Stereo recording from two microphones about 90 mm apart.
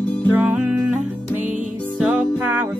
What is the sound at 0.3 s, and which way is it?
Music, 20° right (ahead or behind).